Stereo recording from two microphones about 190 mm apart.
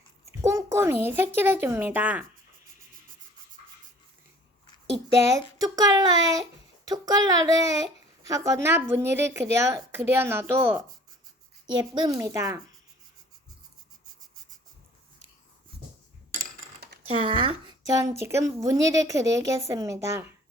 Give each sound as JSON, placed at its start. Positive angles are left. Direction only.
{"t": 0.4, "sound": "a child's voice", "side_deg": -15}
{"t": 5.3, "sound": "a child's voice", "side_deg": -20}
{"t": 11.8, "sound": "a child's voice", "side_deg": -25}
{"t": 16.3, "sound": "a sound", "side_deg": -50}
{"t": 17.2, "sound": "a woman's voice", "side_deg": -25}